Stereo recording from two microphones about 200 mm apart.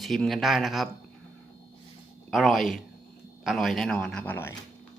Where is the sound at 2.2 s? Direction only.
Centre (ahead or behind).